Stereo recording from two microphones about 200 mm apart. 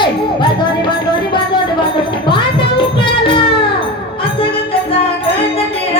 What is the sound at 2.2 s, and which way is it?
Music, 25° left (ahead or behind).